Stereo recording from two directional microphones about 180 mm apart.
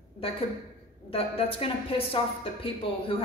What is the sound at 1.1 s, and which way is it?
A woman's voice, 30° left (ahead or behind).